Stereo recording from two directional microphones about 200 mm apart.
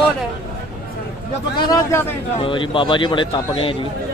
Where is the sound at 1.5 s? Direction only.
20° left (ahead or behind).